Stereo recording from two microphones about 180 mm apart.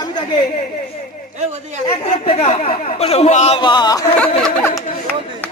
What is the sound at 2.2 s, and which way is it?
Speech, 30° left (ahead or behind).